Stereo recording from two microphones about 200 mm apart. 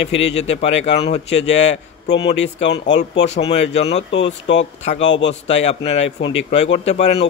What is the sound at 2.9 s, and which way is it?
Speech, 60° left (ahead or behind).